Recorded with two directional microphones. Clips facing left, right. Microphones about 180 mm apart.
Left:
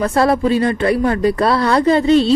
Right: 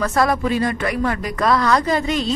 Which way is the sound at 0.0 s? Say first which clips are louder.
Left 4 dB; 30° left (ahead or behind).